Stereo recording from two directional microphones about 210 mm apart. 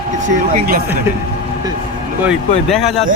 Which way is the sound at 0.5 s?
45° right (ahead or behind).